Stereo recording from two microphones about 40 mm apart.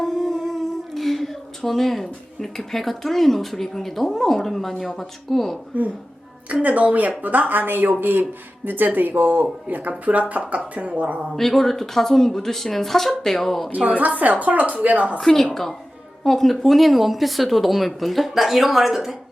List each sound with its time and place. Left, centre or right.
0.0 s speech: centre
6.5 s speech: right
11.3 s speech: centre
13.7 s speech: right
15.2 s speech: centre